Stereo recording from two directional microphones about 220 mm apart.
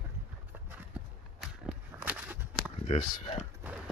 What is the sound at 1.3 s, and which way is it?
Walk, centre (ahead or behind).